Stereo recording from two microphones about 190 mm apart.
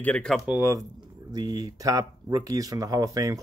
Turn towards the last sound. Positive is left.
turn(degrees=-15)  # may be behind; listen again after turning